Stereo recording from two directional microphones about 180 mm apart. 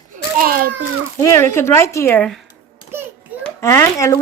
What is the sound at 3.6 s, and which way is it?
Speech, 15° left (ahead or behind).